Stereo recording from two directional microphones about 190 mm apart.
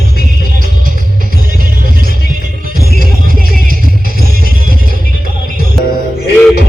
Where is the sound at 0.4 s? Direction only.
45° right (ahead or behind).